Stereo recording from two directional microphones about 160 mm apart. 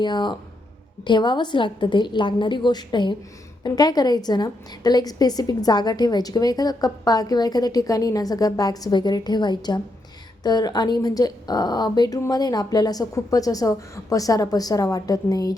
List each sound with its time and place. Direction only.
0.0 s a woman's voice: 30° left (ahead or behind)